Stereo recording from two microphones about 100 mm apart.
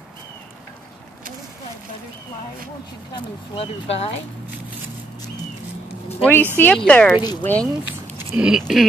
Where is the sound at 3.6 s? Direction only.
80° left.